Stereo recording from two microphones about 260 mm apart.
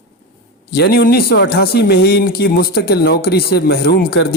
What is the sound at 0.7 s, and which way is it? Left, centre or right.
Speech, left.